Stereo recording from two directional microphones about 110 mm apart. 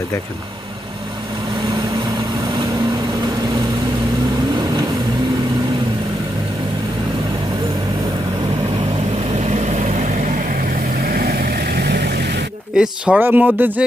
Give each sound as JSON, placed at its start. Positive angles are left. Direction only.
{"t": 9.5, "sound": "vehicle", "side_deg": -90}
{"t": 12.7, "sound": "speech", "side_deg": -10}